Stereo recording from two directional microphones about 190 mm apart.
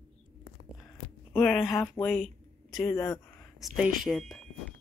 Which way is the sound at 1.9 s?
5° left (ahead or behind).